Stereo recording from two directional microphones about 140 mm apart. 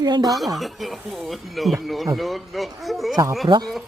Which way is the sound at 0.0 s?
30° right (ahead or behind).